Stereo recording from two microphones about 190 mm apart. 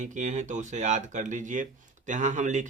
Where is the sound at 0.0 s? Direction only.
40° right (ahead or behind).